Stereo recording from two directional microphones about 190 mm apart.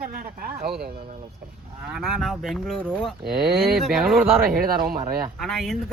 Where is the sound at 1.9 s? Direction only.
Centre (ahead or behind).